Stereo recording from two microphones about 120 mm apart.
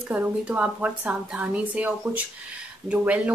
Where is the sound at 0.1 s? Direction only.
10° right (ahead or behind).